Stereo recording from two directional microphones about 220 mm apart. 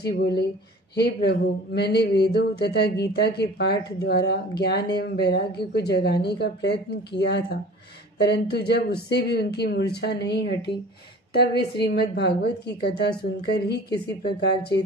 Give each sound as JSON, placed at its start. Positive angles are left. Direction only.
{"t": 0.0, "sound": "speech", "side_deg": 45}